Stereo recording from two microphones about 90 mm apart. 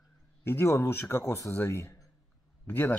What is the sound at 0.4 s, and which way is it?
A man's voice, 30° left (ahead or behind).